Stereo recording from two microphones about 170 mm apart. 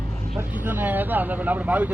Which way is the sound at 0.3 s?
10° right (ahead or behind).